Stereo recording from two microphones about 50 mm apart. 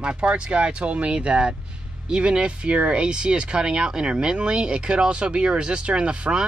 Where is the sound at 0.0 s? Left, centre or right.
Right.